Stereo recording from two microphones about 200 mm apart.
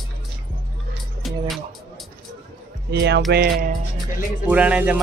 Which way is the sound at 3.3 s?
50° right (ahead or behind).